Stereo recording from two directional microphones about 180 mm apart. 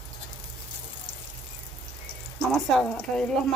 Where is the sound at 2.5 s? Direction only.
5° left (ahead or behind).